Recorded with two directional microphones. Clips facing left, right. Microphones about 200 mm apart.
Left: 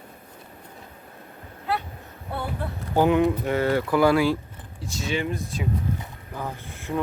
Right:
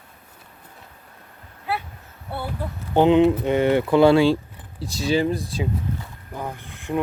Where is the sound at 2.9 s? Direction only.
25° right (ahead or behind).